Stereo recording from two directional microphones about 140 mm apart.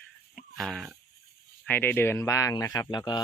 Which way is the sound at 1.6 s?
15° left (ahead or behind).